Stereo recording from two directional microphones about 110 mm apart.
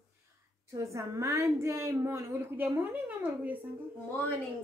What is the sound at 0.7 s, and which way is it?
A woman's voice, 30° right (ahead or behind).